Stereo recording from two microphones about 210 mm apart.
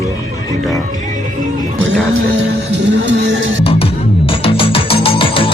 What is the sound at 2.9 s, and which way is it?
Music, 60° right (ahead or behind).